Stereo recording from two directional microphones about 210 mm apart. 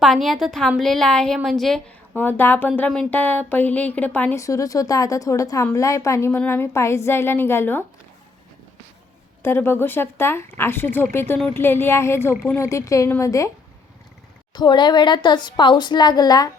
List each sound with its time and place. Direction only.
0.0 s a woman's voice: centre (ahead or behind)
9.4 s a woman's voice: 10° left (ahead or behind)
14.5 s a woman's voice: 20° left (ahead or behind)